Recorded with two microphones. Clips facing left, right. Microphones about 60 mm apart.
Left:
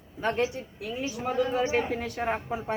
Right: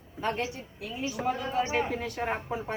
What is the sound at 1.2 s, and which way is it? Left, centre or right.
A woman's voice, centre.